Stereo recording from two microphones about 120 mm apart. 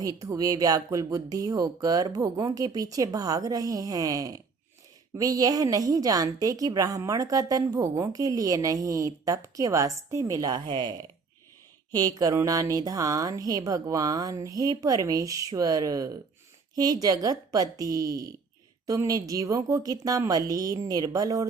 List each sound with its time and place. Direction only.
0.2 s a woman's voice: 30° right (ahead or behind)